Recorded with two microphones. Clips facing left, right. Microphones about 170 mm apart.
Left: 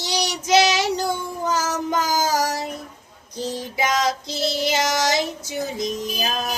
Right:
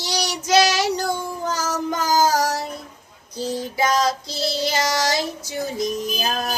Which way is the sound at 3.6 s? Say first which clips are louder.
Right 2 dB; 15° left (ahead or behind).